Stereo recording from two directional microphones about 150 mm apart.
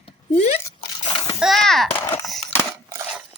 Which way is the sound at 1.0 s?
30° left (ahead or behind).